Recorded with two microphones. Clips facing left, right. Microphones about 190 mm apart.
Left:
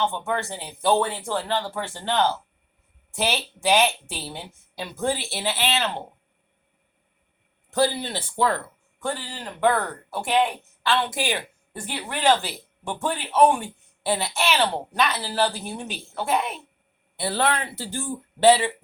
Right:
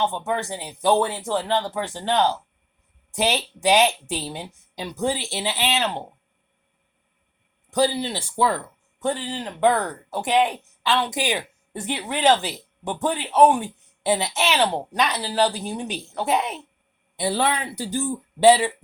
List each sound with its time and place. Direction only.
0.0 s speech: 15° right (ahead or behind)
7.7 s speech: 15° right (ahead or behind)